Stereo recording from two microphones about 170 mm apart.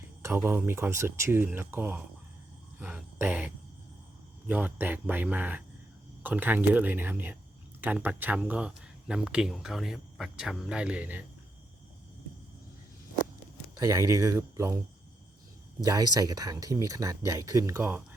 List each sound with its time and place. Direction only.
0.2 s speech: 15° right (ahead or behind)
2.7 s a sound: 10° right (ahead or behind)
4.4 s speech: 10° right (ahead or behind)
13.7 s speech: 20° right (ahead or behind)
15.8 s speech: 20° right (ahead or behind)